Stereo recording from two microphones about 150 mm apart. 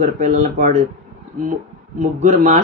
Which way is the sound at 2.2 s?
55° right (ahead or behind).